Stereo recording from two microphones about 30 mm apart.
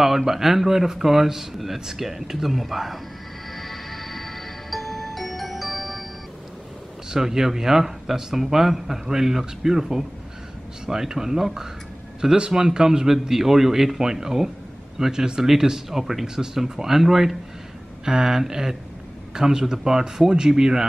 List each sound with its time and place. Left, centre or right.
0.0 s a man's voice: centre
3.5 s music: centre
7.1 s a man's voice: centre
15.9 s a man's voice: centre